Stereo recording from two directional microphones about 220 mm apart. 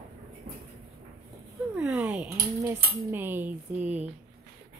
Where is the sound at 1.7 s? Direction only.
5° right (ahead or behind).